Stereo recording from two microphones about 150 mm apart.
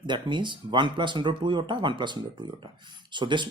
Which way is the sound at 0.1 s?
30° right (ahead or behind).